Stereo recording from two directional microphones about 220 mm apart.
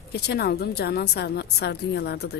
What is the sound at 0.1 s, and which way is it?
A woman's voice, 45° left (ahead or behind).